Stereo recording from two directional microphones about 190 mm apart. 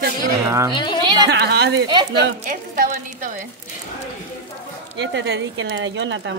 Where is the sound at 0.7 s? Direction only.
25° left (ahead or behind).